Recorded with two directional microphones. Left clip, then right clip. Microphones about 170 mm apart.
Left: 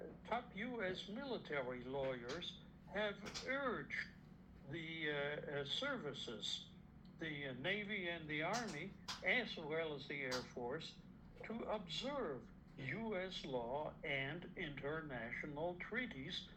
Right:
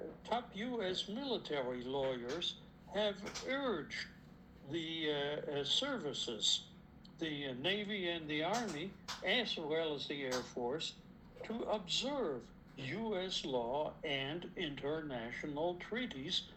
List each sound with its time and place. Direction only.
0.3 s speech: 40° right (ahead or behind)